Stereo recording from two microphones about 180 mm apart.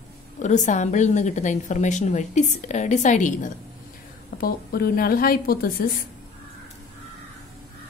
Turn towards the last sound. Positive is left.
turn(degrees=55)  # may be behind; listen again after turning